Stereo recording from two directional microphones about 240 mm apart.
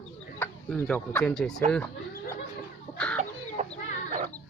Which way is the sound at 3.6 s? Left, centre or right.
Right.